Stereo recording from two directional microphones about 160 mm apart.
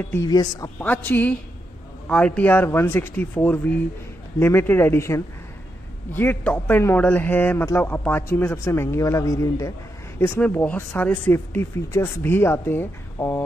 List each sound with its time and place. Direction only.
0.1 s speech: 20° left (ahead or behind)
0.7 s a man's voice: 10° left (ahead or behind)